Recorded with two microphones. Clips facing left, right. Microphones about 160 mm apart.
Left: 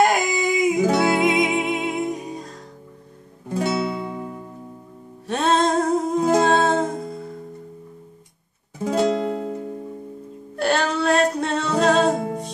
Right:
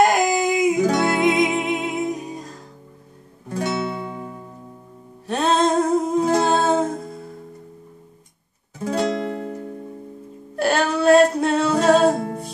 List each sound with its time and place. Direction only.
0.0 s music: centre (ahead or behind)
3.4 s music: 15° left (ahead or behind)
5.2 s music: centre (ahead or behind)
6.4 s humming: centre (ahead or behind)
8.8 s music: 20° left (ahead or behind)
10.5 s music: centre (ahead or behind)